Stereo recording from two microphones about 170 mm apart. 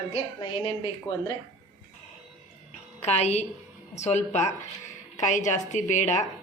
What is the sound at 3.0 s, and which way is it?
Speech, 40° left (ahead or behind).